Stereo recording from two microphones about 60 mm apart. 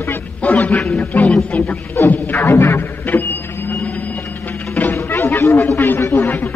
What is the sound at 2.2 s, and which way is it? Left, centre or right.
Music, left.